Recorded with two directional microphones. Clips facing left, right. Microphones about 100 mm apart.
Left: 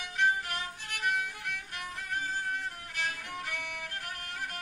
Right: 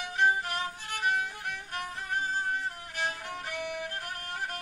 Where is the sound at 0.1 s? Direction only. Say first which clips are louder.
Right 2 dB; 25° right (ahead or behind).